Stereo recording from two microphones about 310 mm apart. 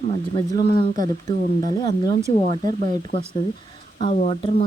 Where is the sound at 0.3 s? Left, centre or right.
Centre.